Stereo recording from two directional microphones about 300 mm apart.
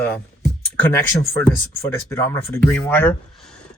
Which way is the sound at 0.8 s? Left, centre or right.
Centre.